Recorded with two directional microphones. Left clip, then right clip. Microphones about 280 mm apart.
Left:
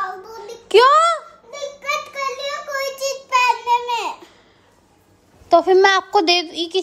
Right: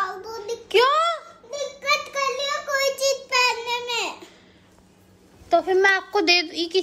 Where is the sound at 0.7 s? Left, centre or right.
Left.